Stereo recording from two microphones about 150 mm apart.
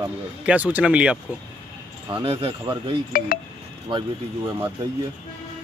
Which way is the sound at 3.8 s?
35° right (ahead or behind).